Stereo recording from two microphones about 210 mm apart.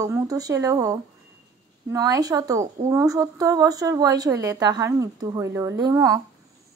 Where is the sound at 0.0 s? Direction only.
15° right (ahead or behind).